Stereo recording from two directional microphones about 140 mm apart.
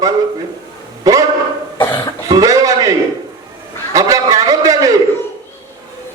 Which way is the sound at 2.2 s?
25° right (ahead or behind).